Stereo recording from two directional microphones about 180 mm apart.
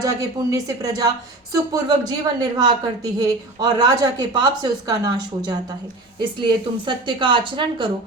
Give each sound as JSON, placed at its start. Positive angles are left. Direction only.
{"t": 0.0, "sound": "a woman's voice", "side_deg": -20}